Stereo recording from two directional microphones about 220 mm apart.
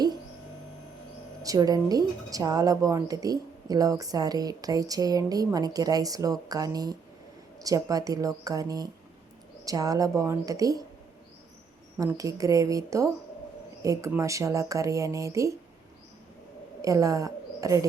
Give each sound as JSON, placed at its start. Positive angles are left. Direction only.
{"t": 1.4, "sound": "a woman's voice", "side_deg": -15}
{"t": 11.9, "sound": "a woman's voice", "side_deg": -15}
{"t": 16.8, "sound": "a woman's voice", "side_deg": -15}